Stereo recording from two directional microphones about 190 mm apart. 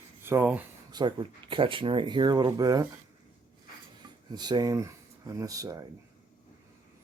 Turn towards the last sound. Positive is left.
turn(degrees=-15)  # may be behind; listen again after turning